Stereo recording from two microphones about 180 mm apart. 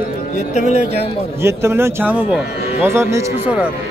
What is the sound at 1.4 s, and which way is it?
Speech, 15° right (ahead or behind).